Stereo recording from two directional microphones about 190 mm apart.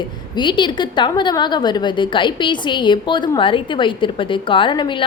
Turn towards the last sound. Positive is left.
turn(degrees=25)  # may be behind; listen again after turning